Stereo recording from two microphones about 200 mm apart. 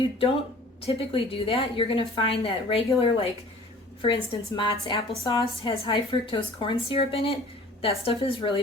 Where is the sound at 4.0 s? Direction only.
25° left (ahead or behind).